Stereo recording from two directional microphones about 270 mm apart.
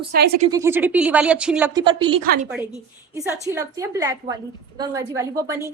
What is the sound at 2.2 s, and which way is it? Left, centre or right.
Speech, right.